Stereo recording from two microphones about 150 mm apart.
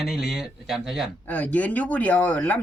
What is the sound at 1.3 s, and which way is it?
Speech, 10° left (ahead or behind).